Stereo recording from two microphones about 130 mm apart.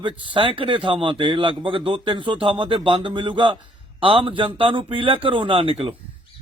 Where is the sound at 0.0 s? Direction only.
40° right (ahead or behind).